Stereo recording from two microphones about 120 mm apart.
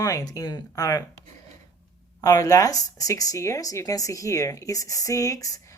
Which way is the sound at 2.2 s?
30° left (ahead or behind).